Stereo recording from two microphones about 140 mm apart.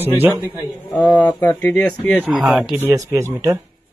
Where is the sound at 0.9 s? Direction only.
5° left (ahead or behind).